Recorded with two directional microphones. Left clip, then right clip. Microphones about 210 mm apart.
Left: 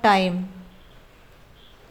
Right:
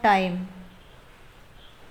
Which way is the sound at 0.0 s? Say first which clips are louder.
Left 2 dB; 20° left (ahead or behind).